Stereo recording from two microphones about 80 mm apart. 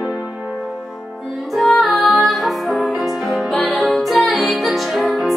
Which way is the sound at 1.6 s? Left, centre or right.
Centre.